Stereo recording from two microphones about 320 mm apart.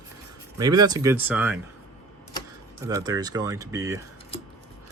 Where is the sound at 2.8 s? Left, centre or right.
Centre.